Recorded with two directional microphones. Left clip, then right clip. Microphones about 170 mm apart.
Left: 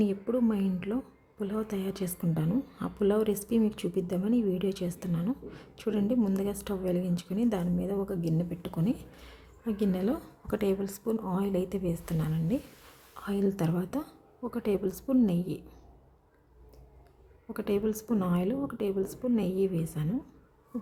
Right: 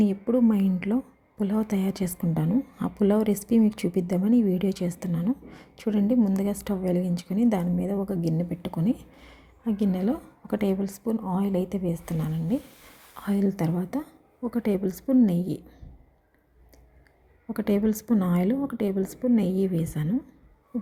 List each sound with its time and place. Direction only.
0.0 s a woman's voice: 15° right (ahead or behind)
17.5 s a woman's voice: 20° right (ahead or behind)